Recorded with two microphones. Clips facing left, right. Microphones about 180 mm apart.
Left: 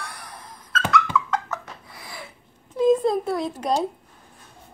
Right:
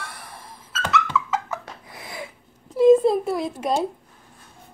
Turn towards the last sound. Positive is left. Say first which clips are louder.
# even
turn(degrees=-5)  # may be behind; listen again after turning